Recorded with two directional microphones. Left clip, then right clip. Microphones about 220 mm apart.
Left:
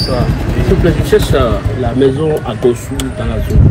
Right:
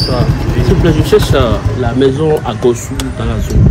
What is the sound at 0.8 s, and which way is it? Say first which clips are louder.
Speech: right 2 dB; 30° right (ahead or behind).